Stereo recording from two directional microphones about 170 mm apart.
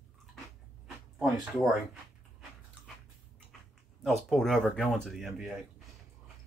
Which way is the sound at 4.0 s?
Centre (ahead or behind).